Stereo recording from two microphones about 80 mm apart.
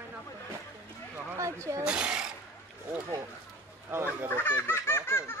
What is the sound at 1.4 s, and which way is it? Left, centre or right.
Speech, right.